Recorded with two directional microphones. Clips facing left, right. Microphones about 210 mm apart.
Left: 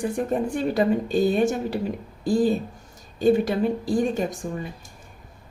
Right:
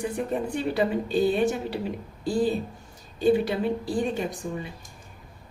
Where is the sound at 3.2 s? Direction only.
45° left (ahead or behind).